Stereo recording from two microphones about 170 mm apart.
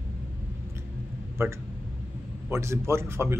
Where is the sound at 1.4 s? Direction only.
15° right (ahead or behind).